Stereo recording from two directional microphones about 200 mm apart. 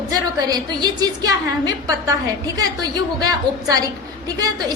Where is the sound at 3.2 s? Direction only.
20° right (ahead or behind).